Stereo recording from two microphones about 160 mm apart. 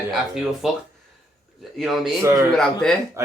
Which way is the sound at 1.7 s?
Centre (ahead or behind).